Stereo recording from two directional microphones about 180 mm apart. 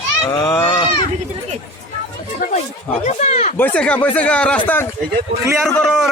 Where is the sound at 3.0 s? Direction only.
40° left (ahead or behind).